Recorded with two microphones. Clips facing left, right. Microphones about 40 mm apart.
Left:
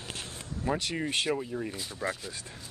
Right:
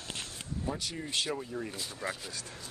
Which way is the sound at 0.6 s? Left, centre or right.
Left.